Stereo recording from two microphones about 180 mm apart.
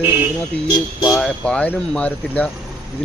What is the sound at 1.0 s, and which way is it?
Speech, 5° left (ahead or behind).